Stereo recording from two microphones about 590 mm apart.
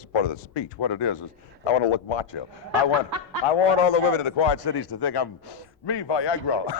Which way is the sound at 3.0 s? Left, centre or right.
Right.